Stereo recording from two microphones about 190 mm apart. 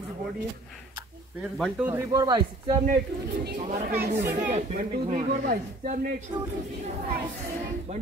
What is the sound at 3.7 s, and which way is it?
Speech, 35° right (ahead or behind).